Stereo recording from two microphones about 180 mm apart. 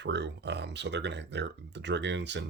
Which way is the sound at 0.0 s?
70° right (ahead or behind).